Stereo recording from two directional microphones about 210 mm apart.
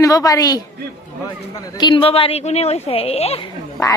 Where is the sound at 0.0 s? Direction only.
15° left (ahead or behind).